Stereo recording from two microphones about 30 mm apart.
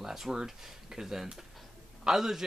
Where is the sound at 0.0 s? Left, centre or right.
Centre.